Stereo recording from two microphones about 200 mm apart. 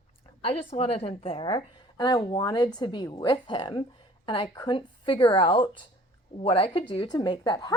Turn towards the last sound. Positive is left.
turn(degrees=20)  # may be behind; listen again after turning